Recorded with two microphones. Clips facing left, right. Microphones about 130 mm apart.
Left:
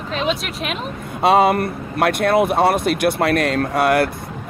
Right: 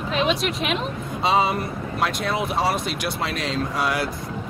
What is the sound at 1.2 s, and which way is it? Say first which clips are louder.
Speech: left 7 dB; 55° left (ahead or behind).